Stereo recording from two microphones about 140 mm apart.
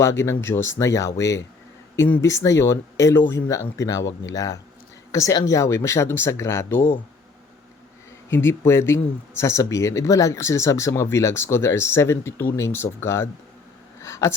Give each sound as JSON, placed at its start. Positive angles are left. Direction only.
{"t": 0.0, "sound": "speech", "side_deg": 20}
{"t": 8.3, "sound": "speech", "side_deg": 15}
{"t": 14.0, "sound": "a sound", "side_deg": 20}